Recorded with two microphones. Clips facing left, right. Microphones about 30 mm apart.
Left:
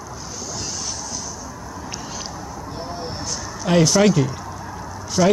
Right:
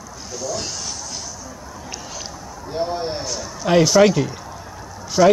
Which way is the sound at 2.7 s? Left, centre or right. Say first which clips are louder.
Right 9 dB; right.